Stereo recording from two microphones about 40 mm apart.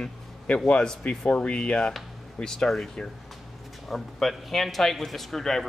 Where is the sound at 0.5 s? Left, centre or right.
Left.